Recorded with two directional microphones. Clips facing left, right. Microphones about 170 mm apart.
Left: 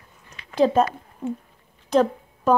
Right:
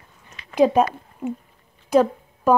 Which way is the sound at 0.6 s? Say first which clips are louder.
Right 2 dB; 15° right (ahead or behind).